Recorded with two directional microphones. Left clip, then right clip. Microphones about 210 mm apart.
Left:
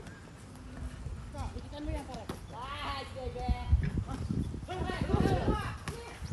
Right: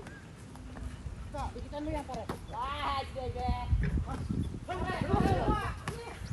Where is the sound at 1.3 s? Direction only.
15° right (ahead or behind).